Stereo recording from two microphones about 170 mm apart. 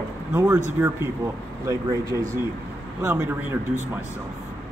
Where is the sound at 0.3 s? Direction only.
15° right (ahead or behind).